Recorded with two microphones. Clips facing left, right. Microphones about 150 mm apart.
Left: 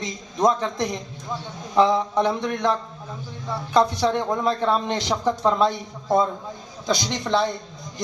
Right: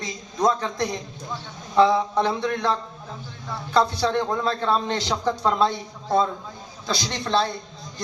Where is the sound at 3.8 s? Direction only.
20° left (ahead or behind).